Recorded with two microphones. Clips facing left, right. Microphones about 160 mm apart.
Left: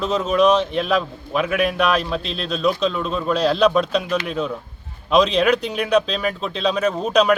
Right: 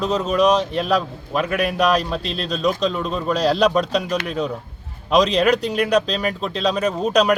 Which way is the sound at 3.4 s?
40° right (ahead or behind).